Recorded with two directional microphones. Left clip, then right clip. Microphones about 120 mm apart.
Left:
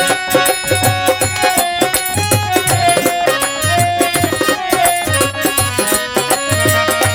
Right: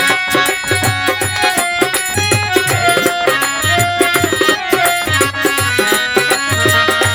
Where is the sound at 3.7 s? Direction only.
30° left (ahead or behind).